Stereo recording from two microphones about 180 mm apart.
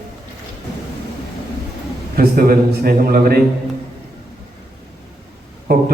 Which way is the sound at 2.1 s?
55° right (ahead or behind).